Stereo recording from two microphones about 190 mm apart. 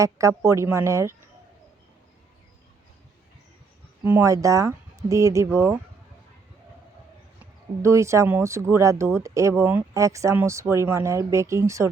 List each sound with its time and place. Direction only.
0.0 s speech: 15° right (ahead or behind)
4.0 s speech: 10° right (ahead or behind)
7.8 s speech: 15° right (ahead or behind)